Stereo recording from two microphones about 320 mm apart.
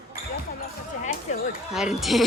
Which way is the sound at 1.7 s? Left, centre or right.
Centre.